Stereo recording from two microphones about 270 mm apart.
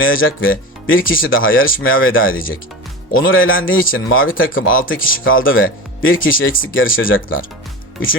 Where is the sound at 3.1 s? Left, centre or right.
Left.